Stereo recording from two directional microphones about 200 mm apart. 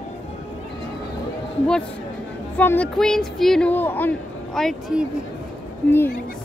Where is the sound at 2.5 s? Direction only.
10° left (ahead or behind).